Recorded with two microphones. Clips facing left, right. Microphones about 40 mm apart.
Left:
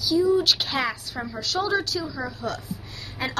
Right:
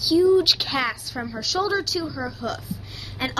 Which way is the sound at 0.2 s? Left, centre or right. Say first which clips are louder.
Right 3 dB; centre.